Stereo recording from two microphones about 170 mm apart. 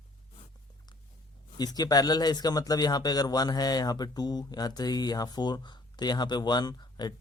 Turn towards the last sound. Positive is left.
turn(degrees=25)  # may be behind; listen again after turning